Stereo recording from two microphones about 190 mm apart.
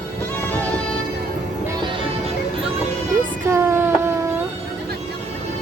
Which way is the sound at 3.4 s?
15° right (ahead or behind).